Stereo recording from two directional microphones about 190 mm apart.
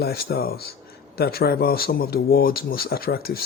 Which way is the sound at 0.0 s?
55° left (ahead or behind).